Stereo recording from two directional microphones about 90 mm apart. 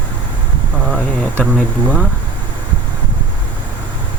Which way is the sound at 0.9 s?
5° left (ahead or behind).